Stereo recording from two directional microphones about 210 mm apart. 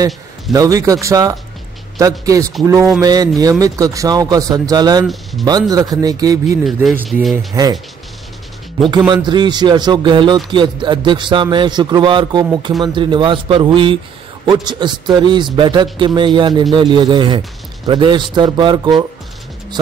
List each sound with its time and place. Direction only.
0.0 s a man's voice: 15° right (ahead or behind)
6.6 s speech: centre (ahead or behind)
7.5 s a man's voice: 15° right (ahead or behind)
9.1 s speech: 20° right (ahead or behind)